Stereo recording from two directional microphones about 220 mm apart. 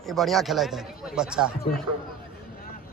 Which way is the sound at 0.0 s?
Centre (ahead or behind).